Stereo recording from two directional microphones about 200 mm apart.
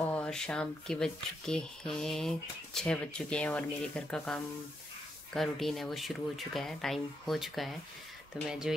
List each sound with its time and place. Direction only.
0.0 s speech: 5° left (ahead or behind)